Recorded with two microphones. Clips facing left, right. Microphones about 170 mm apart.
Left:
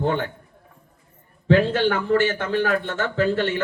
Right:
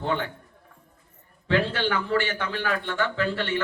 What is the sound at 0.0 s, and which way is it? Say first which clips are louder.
Speech: left 4 dB; 45° left (ahead or behind).